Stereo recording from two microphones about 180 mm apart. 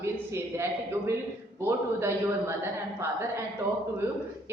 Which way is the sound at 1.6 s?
15° right (ahead or behind).